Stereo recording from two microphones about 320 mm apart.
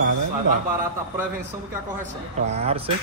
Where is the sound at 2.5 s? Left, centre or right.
Centre.